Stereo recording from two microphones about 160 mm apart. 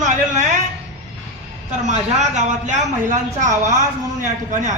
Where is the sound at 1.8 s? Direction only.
45° right (ahead or behind).